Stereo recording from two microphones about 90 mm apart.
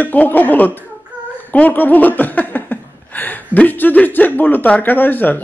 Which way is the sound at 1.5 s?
20° left (ahead or behind).